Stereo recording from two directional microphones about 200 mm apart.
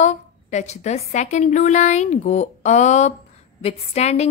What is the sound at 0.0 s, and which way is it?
A woman's voice, 35° left (ahead or behind).